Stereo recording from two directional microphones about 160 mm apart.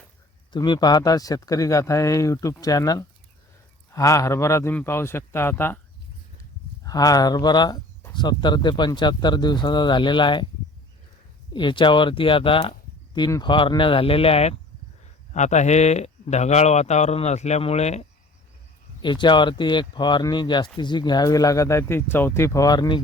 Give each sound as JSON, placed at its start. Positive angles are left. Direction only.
{"t": 0.5, "sound": "a man's voice", "side_deg": 30}
{"t": 6.8, "sound": "speech", "side_deg": 20}
{"t": 11.5, "sound": "speech", "side_deg": 30}
{"t": 19.0, "sound": "speech", "side_deg": 30}